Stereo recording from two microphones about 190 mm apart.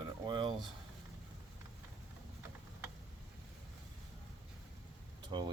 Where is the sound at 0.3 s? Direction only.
25° right (ahead or behind).